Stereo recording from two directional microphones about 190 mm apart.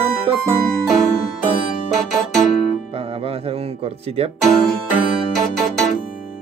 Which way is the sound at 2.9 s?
30° right (ahead or behind).